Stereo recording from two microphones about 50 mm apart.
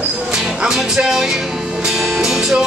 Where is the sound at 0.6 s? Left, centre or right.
Centre.